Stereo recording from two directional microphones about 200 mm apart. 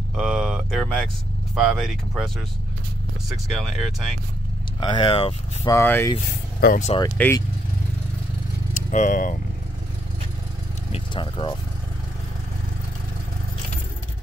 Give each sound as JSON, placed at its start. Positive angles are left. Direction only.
{"t": 0.1, "sound": "a sound", "side_deg": 0}
{"t": 1.5, "sound": "speech", "side_deg": 0}
{"t": 3.5, "sound": "speech", "side_deg": 0}
{"t": 4.7, "sound": "speech", "side_deg": 25}
{"t": 5.8, "sound": "speech", "side_deg": 10}
{"t": 6.6, "sound": "speech", "side_deg": 45}
{"t": 7.2, "sound": "speech", "side_deg": 10}
{"t": 8.7, "sound": "speech", "side_deg": 40}
{"t": 10.9, "sound": "vehicle", "side_deg": 25}